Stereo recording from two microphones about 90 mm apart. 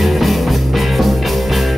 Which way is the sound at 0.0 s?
Centre (ahead or behind).